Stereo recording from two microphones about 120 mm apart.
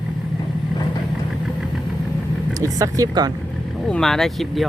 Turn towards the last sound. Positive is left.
turn(degrees=5)  # may be behind; listen again after turning